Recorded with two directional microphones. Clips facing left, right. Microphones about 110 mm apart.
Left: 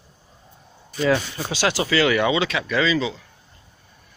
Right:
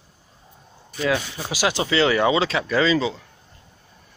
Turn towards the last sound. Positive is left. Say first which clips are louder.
# right 2 dB
turn(degrees=-30)  # may be behind; listen again after turning